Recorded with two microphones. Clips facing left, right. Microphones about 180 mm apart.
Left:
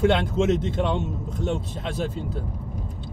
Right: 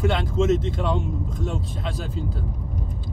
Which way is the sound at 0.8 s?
25° left (ahead or behind).